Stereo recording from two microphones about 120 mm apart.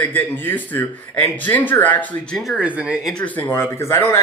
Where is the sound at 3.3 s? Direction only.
20° left (ahead or behind).